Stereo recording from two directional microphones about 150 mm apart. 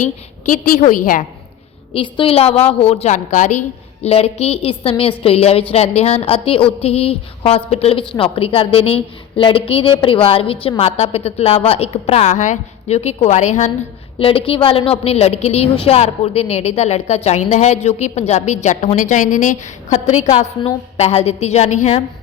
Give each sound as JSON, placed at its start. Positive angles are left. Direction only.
{"t": 0.4, "sound": "a woman's voice", "side_deg": 65}
{"t": 1.9, "sound": "a woman's voice", "side_deg": 35}
{"t": 4.0, "sound": "a woman's voice", "side_deg": 45}
{"t": 14.2, "sound": "a woman's voice", "side_deg": 40}